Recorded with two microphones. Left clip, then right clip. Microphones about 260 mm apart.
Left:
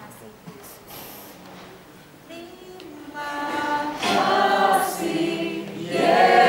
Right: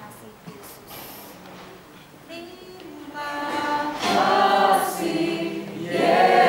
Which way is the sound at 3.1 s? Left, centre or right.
Centre.